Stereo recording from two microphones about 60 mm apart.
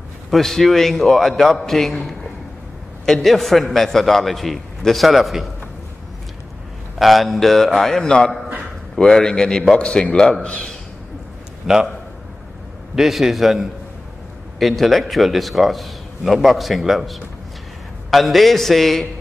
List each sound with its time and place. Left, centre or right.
0.3 s a man's voice: centre
7.0 s a man's voice: centre
11.6 s a man's voice: centre
12.9 s a man's voice: centre